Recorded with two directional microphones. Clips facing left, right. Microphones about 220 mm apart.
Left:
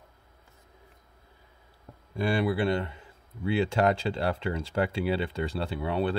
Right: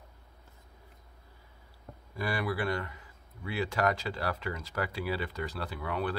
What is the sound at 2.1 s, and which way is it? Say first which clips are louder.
Speech: left 6 dB; 25° left (ahead or behind).